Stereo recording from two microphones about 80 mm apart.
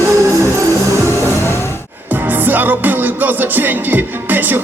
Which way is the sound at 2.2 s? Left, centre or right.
Right.